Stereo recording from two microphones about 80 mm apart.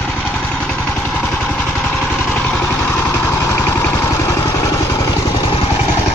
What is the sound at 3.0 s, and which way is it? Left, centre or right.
Vehicle, left.